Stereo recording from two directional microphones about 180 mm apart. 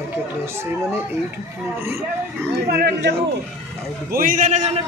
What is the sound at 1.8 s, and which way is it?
Speech, 15° right (ahead or behind).